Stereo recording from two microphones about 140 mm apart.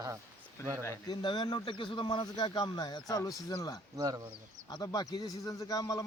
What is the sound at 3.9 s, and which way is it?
Speech, 25° right (ahead or behind).